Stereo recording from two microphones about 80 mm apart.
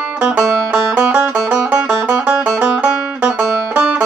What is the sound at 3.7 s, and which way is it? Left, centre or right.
Banjo, centre.